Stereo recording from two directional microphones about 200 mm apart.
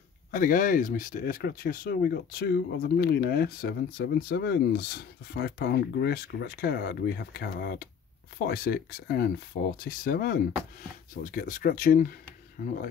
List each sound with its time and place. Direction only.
0.3 s speech: 45° left (ahead or behind)